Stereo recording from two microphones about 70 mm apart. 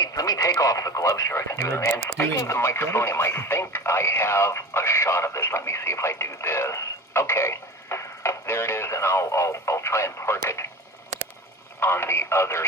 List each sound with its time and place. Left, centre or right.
0.0 s speech: left
11.8 s speech: left